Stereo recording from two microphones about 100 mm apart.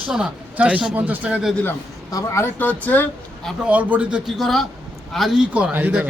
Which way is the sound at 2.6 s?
15° left (ahead or behind).